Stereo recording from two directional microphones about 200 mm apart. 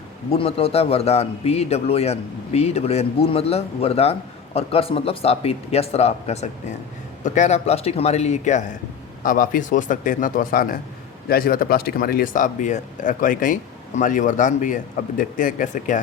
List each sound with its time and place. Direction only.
0.3 s a man's voice: 30° left (ahead or behind)